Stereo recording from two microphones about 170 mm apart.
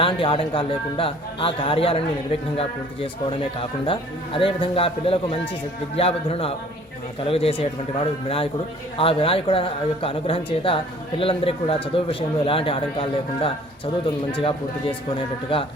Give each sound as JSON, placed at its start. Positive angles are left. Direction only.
{"t": 0.0, "sound": "a man's voice", "side_deg": 30}